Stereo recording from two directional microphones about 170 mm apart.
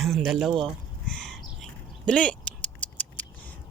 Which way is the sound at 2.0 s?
5° left (ahead or behind).